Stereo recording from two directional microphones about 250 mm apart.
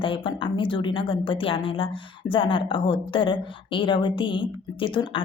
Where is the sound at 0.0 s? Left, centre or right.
Centre.